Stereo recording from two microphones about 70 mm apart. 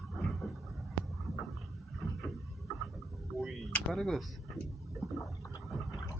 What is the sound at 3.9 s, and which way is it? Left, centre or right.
Speech, centre.